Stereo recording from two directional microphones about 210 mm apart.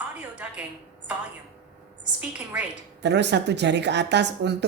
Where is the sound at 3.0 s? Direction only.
55° right (ahead or behind).